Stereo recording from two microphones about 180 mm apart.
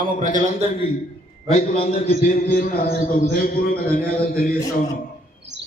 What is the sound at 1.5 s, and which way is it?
A man's voice, 40° left (ahead or behind).